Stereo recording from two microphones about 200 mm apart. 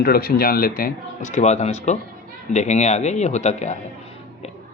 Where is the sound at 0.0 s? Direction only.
50° left (ahead or behind).